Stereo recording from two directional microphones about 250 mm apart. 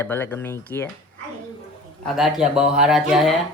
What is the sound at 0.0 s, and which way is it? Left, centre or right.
Speech, centre.